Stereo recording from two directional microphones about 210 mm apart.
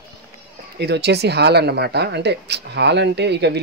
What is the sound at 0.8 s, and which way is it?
Speech, 55° right (ahead or behind).